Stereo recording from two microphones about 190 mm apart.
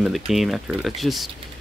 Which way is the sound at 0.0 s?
Centre (ahead or behind).